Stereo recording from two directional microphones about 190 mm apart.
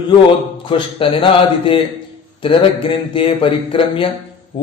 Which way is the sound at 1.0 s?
30° left (ahead or behind).